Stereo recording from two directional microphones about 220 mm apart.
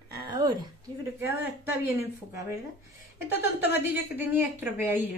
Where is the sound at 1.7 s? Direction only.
10° right (ahead or behind).